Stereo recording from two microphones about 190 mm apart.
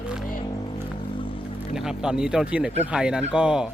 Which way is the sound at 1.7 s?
5° right (ahead or behind).